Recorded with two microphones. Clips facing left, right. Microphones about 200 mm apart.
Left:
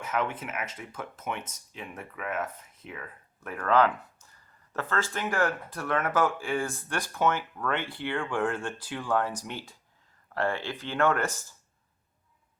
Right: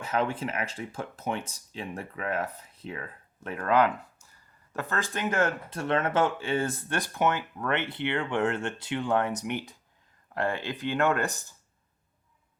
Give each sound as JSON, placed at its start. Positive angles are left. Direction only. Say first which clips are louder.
{"t": 0.1, "sound": "speech", "louder": "right 3 dB", "side_deg": -30}